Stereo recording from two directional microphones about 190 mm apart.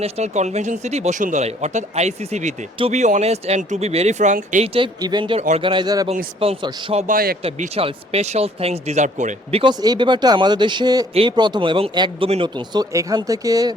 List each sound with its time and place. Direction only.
0.0 s speech: 35° right (ahead or behind)
7.1 s speech: 50° right (ahead or behind)
7.4 s speech: 30° right (ahead or behind)